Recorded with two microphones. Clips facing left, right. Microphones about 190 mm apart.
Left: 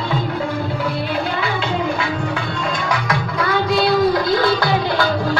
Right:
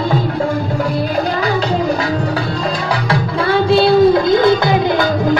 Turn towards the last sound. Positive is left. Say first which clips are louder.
# right 5 dB
turn(degrees=-20)  # may be behind; listen again after turning